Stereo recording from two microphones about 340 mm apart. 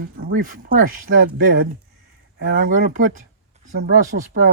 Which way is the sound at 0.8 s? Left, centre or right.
Right.